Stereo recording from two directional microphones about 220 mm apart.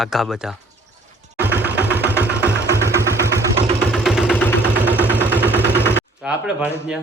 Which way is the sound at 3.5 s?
30° right (ahead or behind).